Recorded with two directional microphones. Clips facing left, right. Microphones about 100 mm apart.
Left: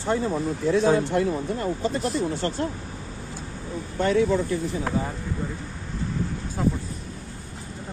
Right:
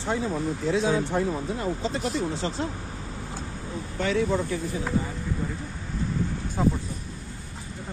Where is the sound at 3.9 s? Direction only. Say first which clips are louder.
Left 4 dB; 45° left (ahead or behind).